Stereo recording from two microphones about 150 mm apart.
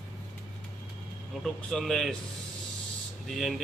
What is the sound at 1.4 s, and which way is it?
Speech, 5° left (ahead or behind).